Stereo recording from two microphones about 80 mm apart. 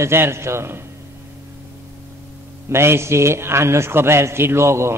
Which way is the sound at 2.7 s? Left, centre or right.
Right.